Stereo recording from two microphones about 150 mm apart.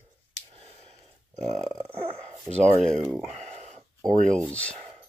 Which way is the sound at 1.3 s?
50° right (ahead or behind).